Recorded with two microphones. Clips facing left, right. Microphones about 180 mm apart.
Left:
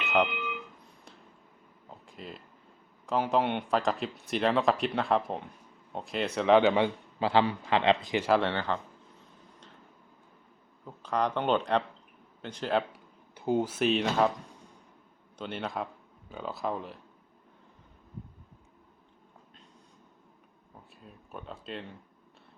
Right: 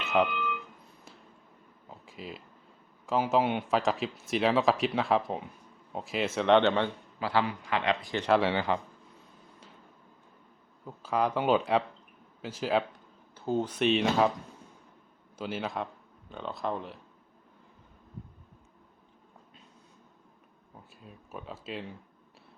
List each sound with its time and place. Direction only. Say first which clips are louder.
1.9 s a sound: right 1 dB; 5° right (ahead or behind)
3.1 s speech: right 1 dB; 5° right (ahead or behind)
7.2 s a man's voice: left 3 dB; 25° left (ahead or behind)
8.3 s speech: right 2 dB; 5° right (ahead or behind)
10.8 s speech: right 1 dB; 5° right (ahead or behind)
12.9 s speech: left 1 dB; 15° left (ahead or behind); by 14.3 s centre (ahead or behind)
15.4 s speech: right 1 dB; 5° right (ahead or behind)
21.0 s speech: right 1 dB; centre (ahead or behind)